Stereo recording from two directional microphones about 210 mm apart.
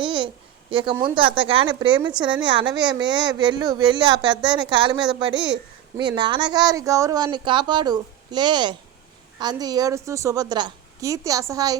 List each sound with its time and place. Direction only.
0.0 s a sound: 20° right (ahead or behind)
0.7 s speech: 25° right (ahead or behind)
5.3 s a child's voice: 5° right (ahead or behind)
6.0 s a woman's voice: 20° right (ahead or behind)